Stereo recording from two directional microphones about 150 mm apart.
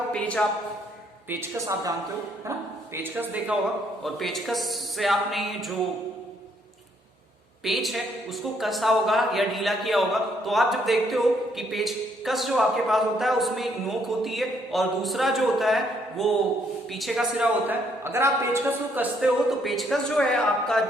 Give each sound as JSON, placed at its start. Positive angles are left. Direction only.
{"t": 0.1, "sound": "a man's voice", "side_deg": 5}
{"t": 1.3, "sound": "a woman's voice", "side_deg": -20}
{"t": 2.9, "sound": "a man's voice", "side_deg": -15}
{"t": 4.0, "sound": "a man's voice", "side_deg": 0}
{"t": 7.6, "sound": "a man's voice", "side_deg": 0}
{"t": 19.5, "sound": "a man's voice", "side_deg": 0}